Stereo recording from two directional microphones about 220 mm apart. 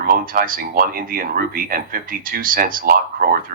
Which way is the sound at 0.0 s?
40° right (ahead or behind).